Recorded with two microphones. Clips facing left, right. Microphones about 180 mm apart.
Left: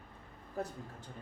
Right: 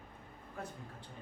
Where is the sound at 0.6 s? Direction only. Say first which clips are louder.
Left 6 dB; 40° left (ahead or behind).